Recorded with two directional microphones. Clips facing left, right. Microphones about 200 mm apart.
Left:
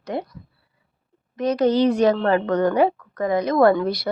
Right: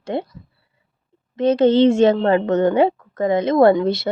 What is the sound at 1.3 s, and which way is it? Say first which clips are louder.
A woman's voice: right 4 dB; 25° right (ahead or behind).